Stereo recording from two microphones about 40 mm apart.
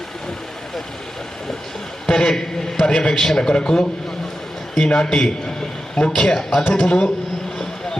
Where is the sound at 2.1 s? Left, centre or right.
Centre.